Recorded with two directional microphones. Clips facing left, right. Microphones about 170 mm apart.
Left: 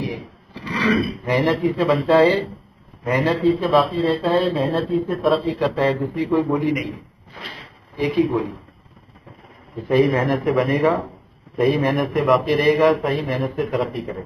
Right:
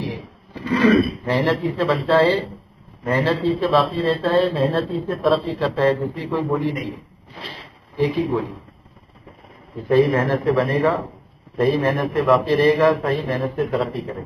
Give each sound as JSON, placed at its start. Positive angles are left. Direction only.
{"t": 0.7, "sound": "a sound", "side_deg": -50}
{"t": 1.2, "sound": "a man's voice", "side_deg": 15}
{"t": 8.0, "sound": "a man's voice", "side_deg": 15}
{"t": 9.8, "sound": "a man's voice", "side_deg": 15}